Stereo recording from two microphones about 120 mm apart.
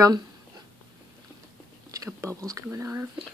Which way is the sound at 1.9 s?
25° right (ahead or behind).